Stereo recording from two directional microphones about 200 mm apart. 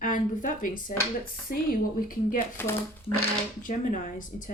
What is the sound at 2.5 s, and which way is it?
Speech, 10° left (ahead or behind).